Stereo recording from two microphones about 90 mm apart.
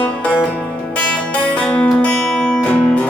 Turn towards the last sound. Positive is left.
turn(degrees=15)  # may be behind; listen again after turning